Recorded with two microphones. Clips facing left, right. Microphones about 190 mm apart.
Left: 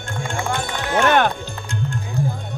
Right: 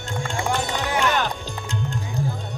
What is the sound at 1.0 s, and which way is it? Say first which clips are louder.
Music: left 8 dB; 60° left (ahead or behind).